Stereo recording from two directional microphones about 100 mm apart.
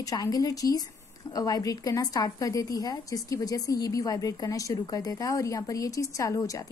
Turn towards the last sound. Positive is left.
turn(degrees=30)  # may be behind; listen again after turning